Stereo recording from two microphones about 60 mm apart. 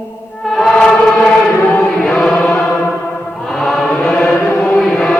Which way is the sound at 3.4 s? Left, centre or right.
Centre.